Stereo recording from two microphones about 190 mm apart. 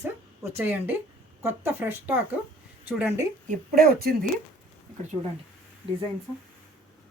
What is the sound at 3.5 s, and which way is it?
Speech, 50° right (ahead or behind).